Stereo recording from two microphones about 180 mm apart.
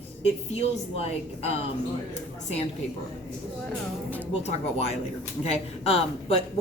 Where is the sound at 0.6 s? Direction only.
35° left (ahead or behind).